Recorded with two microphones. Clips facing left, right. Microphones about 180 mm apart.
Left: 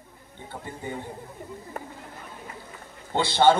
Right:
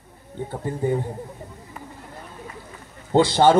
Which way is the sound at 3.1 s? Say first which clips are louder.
Right 4 dB; 40° right (ahead or behind).